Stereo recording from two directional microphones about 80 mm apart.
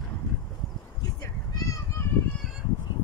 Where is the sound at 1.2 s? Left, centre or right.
Left.